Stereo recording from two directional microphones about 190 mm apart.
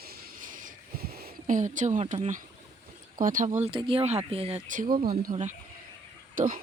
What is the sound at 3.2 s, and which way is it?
Speech, 45° right (ahead or behind).